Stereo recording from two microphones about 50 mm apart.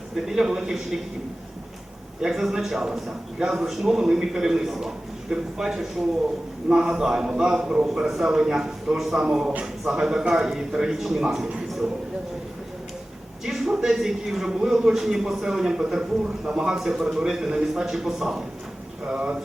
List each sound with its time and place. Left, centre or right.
0.3 s a man's voice: centre
2.2 s a man's voice: centre
9.5 s speech: right
9.9 s a man's voice: centre
13.4 s a man's voice: centre